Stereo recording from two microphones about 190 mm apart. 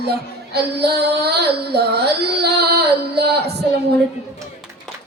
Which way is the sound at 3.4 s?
60° right (ahead or behind).